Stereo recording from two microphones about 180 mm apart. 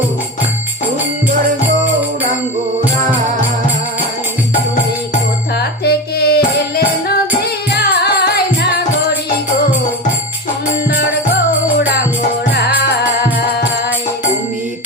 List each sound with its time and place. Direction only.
5.5 s music: 65° left (ahead or behind)